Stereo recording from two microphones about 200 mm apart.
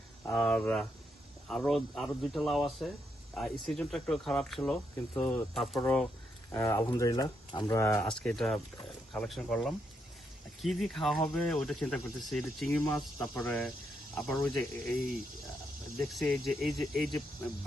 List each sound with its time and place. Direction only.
0.3 s speech: centre (ahead or behind)
6.5 s speech: 15° left (ahead or behind)
8.0 s speech: 5° left (ahead or behind)
12.8 s speech: 15° left (ahead or behind)
16.1 s speech: centre (ahead or behind)